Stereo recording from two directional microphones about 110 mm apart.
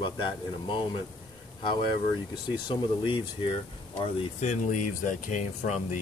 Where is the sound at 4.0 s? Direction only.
75° left (ahead or behind); by 5.7 s 90° left.